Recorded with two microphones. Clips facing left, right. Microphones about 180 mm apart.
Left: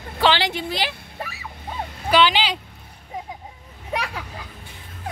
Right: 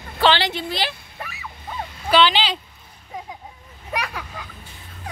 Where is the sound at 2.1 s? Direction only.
10° left (ahead or behind).